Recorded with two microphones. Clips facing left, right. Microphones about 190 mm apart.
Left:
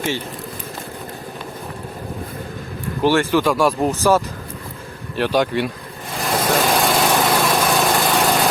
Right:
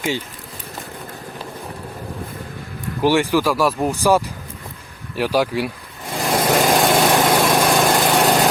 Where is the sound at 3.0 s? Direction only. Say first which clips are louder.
Even; 15° right (ahead or behind).